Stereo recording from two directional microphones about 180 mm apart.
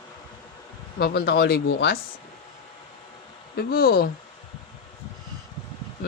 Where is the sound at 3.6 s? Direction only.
55° left (ahead or behind).